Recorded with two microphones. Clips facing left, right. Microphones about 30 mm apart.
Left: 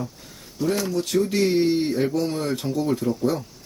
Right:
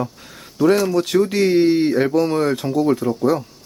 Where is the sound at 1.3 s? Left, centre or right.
Centre.